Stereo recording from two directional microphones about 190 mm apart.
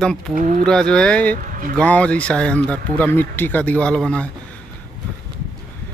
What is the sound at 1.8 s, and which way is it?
Speech, 5° left (ahead or behind).